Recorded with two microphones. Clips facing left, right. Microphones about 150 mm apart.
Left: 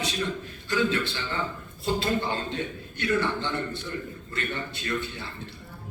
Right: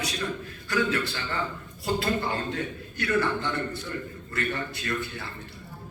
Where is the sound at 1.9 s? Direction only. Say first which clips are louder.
Even; 25° left (ahead or behind).